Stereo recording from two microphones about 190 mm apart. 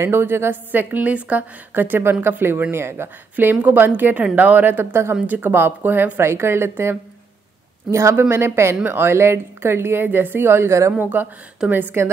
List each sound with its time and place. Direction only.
0.0 s a woman's voice: 10° right (ahead or behind)